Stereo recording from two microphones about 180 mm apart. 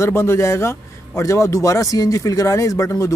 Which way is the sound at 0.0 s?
15° left (ahead or behind).